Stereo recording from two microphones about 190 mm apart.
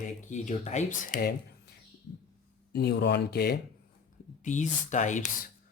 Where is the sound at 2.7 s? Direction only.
60° left (ahead or behind).